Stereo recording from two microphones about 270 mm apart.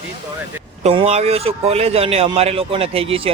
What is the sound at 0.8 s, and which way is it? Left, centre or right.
A man's voice, right.